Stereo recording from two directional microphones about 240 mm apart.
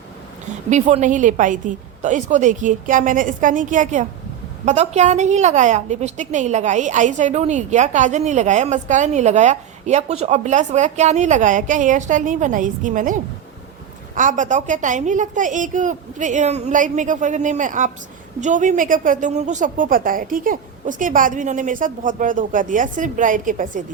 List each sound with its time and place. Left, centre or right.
0.7 s a woman's voice: right
14.2 s a woman's voice: right